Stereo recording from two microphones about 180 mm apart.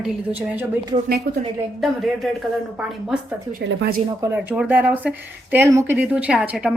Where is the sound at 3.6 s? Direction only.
80° right.